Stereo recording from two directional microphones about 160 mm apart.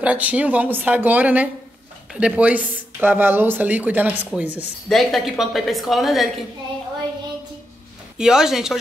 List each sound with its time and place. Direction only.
0.0 s speech: 10° right (ahead or behind)
4.8 s a woman's voice: centre (ahead or behind)
8.2 s a woman's voice: 5° right (ahead or behind)